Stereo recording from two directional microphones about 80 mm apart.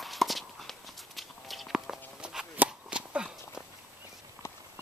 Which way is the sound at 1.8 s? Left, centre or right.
Centre.